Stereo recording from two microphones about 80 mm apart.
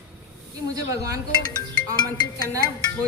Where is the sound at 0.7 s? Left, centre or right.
Right.